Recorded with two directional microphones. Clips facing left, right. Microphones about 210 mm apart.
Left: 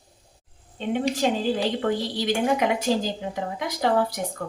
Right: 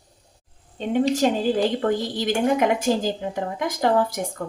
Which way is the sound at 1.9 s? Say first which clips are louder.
Right 2 dB; 50° right (ahead or behind).